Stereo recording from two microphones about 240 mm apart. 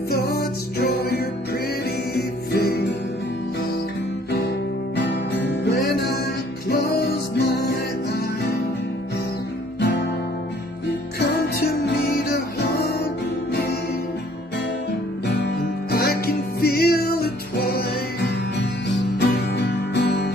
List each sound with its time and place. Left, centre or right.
0.1 s music: left
6.7 s music: left
9.8 s guitar: left
11.1 s music: left
15.9 s music: left